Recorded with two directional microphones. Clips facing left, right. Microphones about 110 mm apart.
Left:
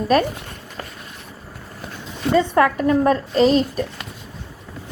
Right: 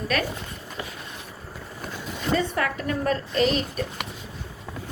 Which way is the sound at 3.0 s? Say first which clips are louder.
Left 5 dB; 35° left (ahead or behind).